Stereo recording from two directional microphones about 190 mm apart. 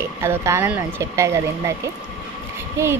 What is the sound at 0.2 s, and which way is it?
A woman's voice, 15° right (ahead or behind).